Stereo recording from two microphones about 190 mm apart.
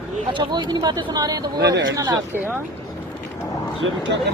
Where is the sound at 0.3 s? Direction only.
25° right (ahead or behind).